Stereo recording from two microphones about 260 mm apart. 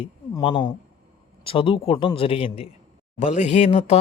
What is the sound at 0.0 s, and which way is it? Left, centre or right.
Speech, centre.